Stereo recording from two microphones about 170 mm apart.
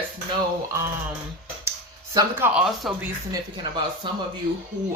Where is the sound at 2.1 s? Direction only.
15° right (ahead or behind).